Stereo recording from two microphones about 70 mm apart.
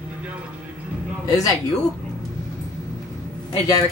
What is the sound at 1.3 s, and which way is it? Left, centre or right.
Speech, left.